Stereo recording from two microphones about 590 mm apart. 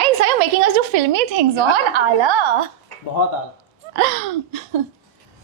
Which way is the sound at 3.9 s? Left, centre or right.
Right.